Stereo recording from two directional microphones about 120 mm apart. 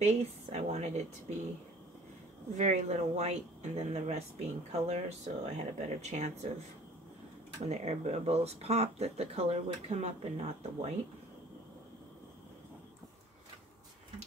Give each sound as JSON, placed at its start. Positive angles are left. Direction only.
{"t": 0.0, "sound": "speech", "side_deg": -65}
{"t": 2.5, "sound": "speech", "side_deg": -75}
{"t": 7.6, "sound": "speech", "side_deg": -65}